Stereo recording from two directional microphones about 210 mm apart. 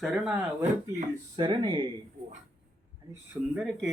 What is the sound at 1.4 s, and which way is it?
Speech, 20° right (ahead or behind).